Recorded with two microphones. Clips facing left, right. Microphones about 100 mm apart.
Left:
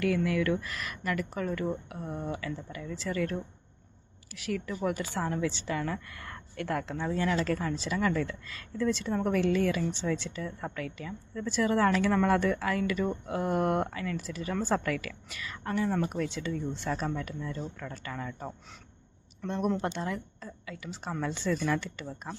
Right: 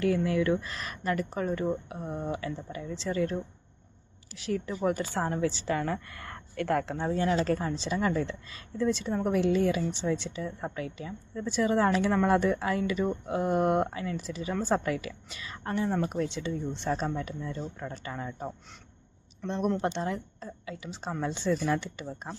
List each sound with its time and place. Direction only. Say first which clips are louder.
0.3 s a woman's voice: right 2 dB; 25° right (ahead or behind); by 6.9 s 45° right (ahead or behind)
6.9 s a woman's voice: right 2 dB; 30° right (ahead or behind)
19.8 s a woman's voice: right 3 dB; 25° right (ahead or behind)